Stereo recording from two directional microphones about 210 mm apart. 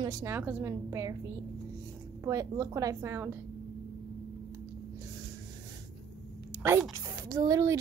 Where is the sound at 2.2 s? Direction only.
15° right (ahead or behind).